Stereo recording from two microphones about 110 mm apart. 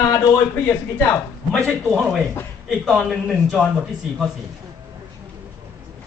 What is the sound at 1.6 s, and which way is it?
Speech, 20° right (ahead or behind).